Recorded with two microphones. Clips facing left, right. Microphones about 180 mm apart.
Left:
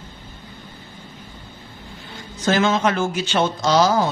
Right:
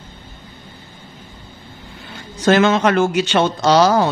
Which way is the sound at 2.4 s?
70° right (ahead or behind).